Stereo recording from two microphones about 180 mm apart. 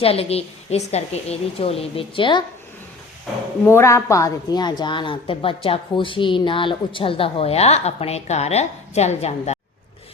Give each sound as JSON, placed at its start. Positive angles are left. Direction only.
{"t": 0.0, "sound": "a woman's voice", "side_deg": 35}
{"t": 3.7, "sound": "a woman's voice", "side_deg": 15}